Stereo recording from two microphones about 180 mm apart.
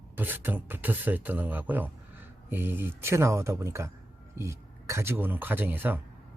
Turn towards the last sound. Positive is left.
turn(degrees=-10)  # may be behind; listen again after turning